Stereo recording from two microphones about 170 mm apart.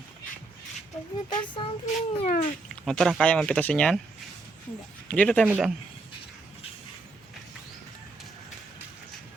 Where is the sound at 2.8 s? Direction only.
Centre (ahead or behind).